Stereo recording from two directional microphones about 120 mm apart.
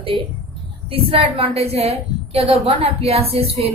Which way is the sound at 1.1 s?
55° right (ahead or behind).